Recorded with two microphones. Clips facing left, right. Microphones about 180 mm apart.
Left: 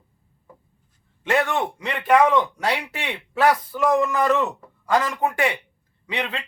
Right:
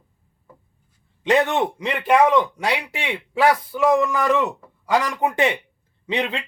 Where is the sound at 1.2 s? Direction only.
20° right (ahead or behind).